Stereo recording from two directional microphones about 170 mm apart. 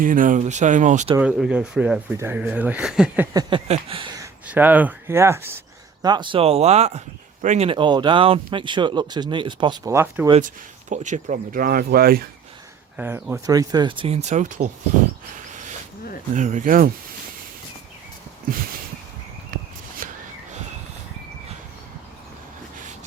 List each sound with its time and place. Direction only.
0.0 s speech: 50° right (ahead or behind)
1.2 s speech: 5° right (ahead or behind)
3.7 s a sound: 30° right (ahead or behind)
4.4 s speech: 10° right (ahead or behind); by 9.9 s 25° right (ahead or behind)
9.9 s speech: 15° right (ahead or behind)
10.4 s speech: 45° right (ahead or behind); by 12.2 s 60° right (ahead or behind)
13.0 s speech: 10° right (ahead or behind); by 14.7 s 45° right (ahead or behind)
16.3 s speech: 45° right (ahead or behind)
20.0 s a sound: 50° right (ahead or behind)